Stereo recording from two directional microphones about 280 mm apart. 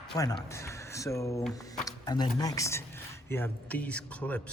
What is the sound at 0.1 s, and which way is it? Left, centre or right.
Speech, centre.